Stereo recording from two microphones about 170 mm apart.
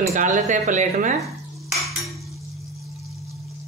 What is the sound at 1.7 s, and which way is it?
Cutlery, centre (ahead or behind).